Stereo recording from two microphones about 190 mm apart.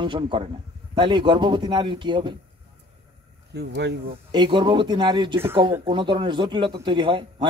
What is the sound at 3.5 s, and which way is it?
Speech, 60° right (ahead or behind).